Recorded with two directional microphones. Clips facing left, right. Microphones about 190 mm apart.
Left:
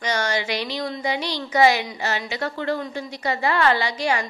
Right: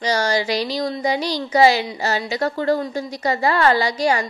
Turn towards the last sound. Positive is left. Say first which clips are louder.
# right 4 dB
turn(degrees=-40)  # may be behind; listen again after turning